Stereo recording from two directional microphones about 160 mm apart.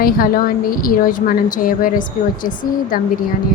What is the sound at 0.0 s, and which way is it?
A woman's voice, 65° left (ahead or behind).